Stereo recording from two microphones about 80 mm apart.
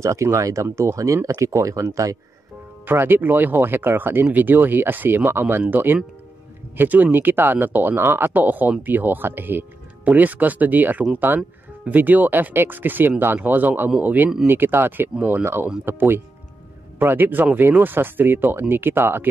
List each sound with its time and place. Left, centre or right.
0.0 s speech: right
2.9 s speech: right